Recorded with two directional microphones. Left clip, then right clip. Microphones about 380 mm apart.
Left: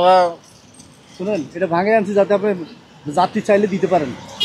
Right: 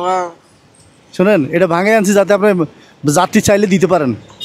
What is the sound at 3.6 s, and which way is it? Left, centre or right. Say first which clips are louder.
Speech: right 4 dB; right.